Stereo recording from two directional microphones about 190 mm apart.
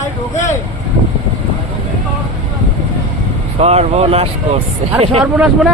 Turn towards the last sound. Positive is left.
turn(degrees=-5)  # may be behind; listen again after turning